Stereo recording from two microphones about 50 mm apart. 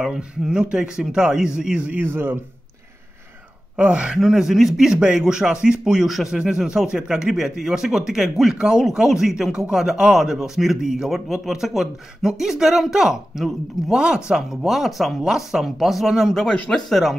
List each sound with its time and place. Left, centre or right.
0.0 s speech: centre
2.0 s speech: right
3.7 s speech: right
4.2 s speech: centre
16.5 s speech: centre
16.9 s speech: centre